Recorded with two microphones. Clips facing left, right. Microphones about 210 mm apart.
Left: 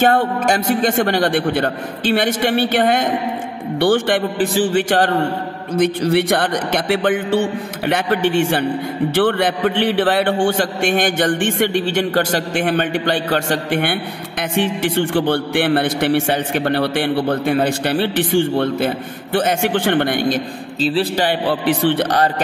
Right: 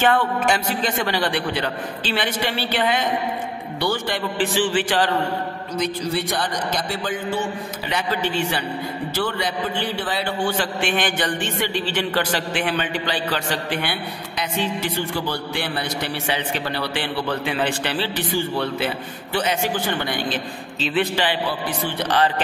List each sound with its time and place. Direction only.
0.0 s a man's voice: 45° left (ahead or behind)
4.2 s a man's voice: 40° left (ahead or behind)
5.8 s a man's voice: 65° left (ahead or behind)
7.9 s a man's voice: 50° left (ahead or behind)
9.1 s a man's voice: 60° left (ahead or behind)
15.1 s a man's voice: 60° left (ahead or behind)
18.6 s a man's voice: 45° left (ahead or behind)
19.6 s a man's voice: 65° left (ahead or behind)
20.2 s a man's voice: 45° left (ahead or behind)
20.9 s a man's voice: 35° left (ahead or behind)
21.3 s speech: 70° left (ahead or behind)
21.9 s a man's voice: 45° left (ahead or behind)